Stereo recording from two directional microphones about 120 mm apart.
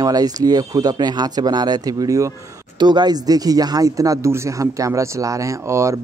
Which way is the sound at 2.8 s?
35° right (ahead or behind).